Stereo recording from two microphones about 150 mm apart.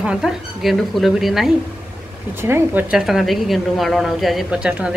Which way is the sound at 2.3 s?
15° right (ahead or behind).